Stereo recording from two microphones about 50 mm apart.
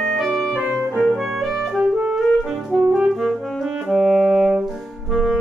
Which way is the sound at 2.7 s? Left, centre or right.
Centre.